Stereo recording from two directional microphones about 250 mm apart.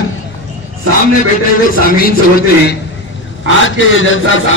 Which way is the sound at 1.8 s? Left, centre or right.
Left.